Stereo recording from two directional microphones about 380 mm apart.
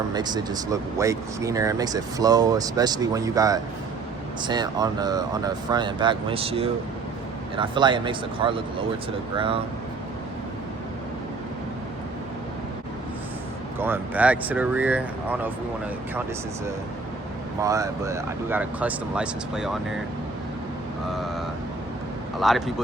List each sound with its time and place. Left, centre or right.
0.1 s speech: centre
13.7 s speech: centre
17.6 s speech: centre
22.4 s speech: centre